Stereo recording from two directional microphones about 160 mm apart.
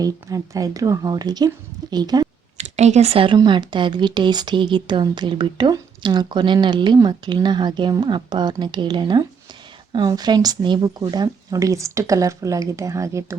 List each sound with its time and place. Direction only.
0.0 s speech: 20° right (ahead or behind)
2.6 s speech: 45° right (ahead or behind); by 13.2 s 20° right (ahead or behind)